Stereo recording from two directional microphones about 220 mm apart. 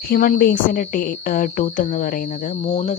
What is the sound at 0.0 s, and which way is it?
Speech, 40° left (ahead or behind).